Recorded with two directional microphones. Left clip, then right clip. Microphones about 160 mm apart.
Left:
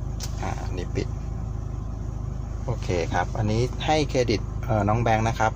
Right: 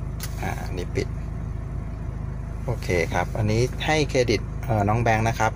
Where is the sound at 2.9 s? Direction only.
20° right (ahead or behind).